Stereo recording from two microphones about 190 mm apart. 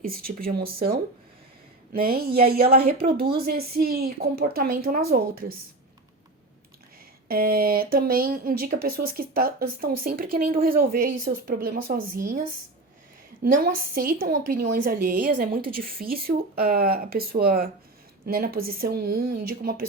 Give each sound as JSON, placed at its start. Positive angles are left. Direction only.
{"t": 0.0, "sound": "speech", "side_deg": -50}
{"t": 7.3, "sound": "speech", "side_deg": -50}
{"t": 13.9, "sound": "speech", "side_deg": -50}